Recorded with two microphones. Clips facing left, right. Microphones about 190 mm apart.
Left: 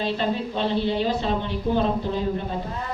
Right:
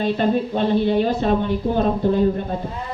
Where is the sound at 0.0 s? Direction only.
50° right (ahead or behind).